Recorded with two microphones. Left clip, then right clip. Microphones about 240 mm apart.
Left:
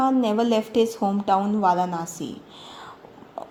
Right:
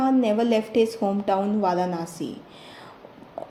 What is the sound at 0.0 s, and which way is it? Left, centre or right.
A woman's voice, left.